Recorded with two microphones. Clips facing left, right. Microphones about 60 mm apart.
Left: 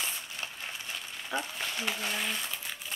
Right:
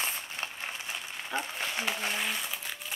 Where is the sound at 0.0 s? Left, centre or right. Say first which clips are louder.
Right 2 dB; right.